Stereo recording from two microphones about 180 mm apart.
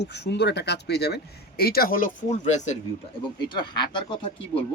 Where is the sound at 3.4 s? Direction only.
25° left (ahead or behind).